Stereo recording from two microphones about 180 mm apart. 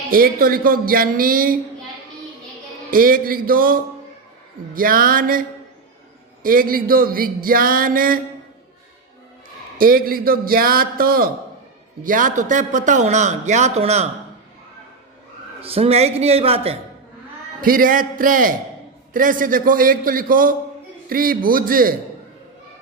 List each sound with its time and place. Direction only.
0.1 s speech: 55° right (ahead or behind)
2.9 s speech: 55° right (ahead or behind)
9.7 s a man's voice: 55° right (ahead or behind); by 14.1 s 35° right (ahead or behind)
15.6 s a man's voice: 35° right (ahead or behind)
17.6 s speech: 50° right (ahead or behind)